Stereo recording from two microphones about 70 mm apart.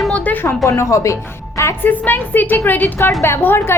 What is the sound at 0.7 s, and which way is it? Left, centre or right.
A woman's voice, left.